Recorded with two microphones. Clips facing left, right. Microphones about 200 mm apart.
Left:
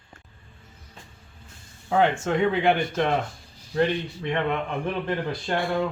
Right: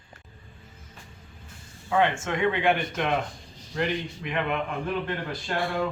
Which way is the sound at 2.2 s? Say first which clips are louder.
Left 3 dB; 35° left (ahead or behind).